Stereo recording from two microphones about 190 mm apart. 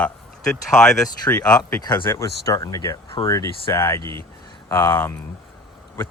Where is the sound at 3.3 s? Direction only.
15° left (ahead or behind).